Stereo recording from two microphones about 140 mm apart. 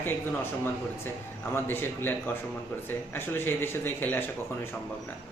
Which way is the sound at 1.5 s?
15° left (ahead or behind).